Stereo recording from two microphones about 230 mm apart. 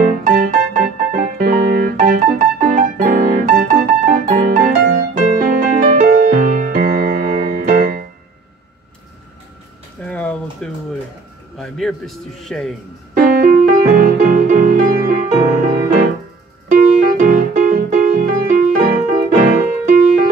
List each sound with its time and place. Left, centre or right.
0.0 s music: right
9.9 s a sound: centre
12.4 s speech: centre
13.1 s music: right
16.6 s keyboard: right
19.6 s music: right